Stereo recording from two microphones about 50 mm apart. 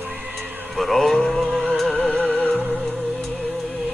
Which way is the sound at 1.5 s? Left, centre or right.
Centre.